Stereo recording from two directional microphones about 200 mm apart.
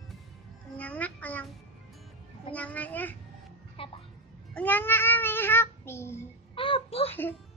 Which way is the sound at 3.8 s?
25° left (ahead or behind).